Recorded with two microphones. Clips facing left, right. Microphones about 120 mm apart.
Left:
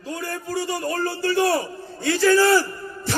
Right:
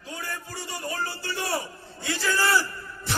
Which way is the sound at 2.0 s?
55° left (ahead or behind).